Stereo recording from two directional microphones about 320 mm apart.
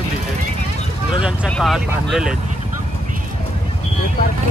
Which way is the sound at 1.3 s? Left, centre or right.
Centre.